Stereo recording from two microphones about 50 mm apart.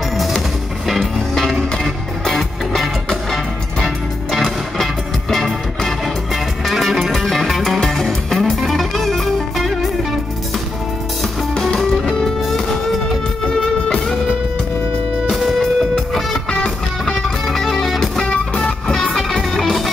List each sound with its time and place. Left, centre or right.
0.8 s music: centre
11.5 s music: centre
13.8 s music: centre
15.2 s music: centre
16.4 s music: centre
17.0 s music: centre
18.6 s music: centre
19.0 s music: centre